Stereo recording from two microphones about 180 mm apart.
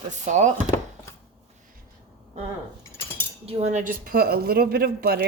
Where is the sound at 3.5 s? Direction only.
40° right (ahead or behind); by 5.2 s 60° right (ahead or behind).